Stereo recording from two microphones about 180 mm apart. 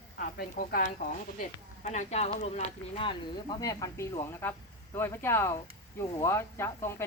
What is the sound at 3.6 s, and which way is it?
A woman's voice, 20° left (ahead or behind).